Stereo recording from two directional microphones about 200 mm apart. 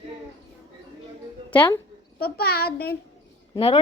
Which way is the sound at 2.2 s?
50° left (ahead or behind).